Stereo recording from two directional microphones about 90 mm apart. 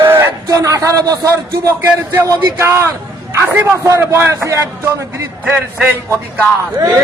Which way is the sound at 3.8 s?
30° right (ahead or behind).